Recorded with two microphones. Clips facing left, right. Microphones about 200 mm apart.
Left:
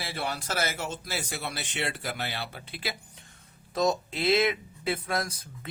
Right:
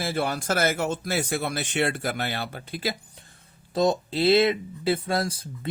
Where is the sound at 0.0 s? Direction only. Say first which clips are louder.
Right 7 dB; 45° right (ahead or behind).